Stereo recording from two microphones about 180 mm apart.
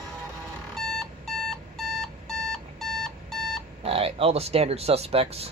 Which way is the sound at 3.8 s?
30° right (ahead or behind).